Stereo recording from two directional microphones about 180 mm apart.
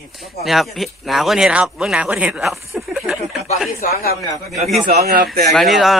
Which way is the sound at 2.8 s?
Centre (ahead or behind).